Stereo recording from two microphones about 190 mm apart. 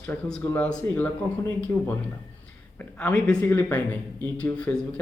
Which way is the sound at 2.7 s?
10° left (ahead or behind).